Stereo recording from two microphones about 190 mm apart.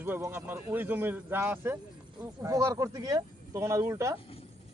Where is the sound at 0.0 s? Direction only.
10° right (ahead or behind).